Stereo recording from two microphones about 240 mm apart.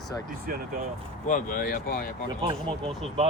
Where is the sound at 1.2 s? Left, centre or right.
Left.